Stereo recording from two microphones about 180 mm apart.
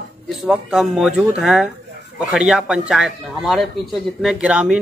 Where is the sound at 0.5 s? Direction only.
Centre (ahead or behind).